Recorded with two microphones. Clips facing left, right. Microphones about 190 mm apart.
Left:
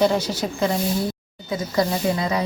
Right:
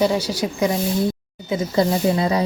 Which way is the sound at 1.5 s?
25° right (ahead or behind).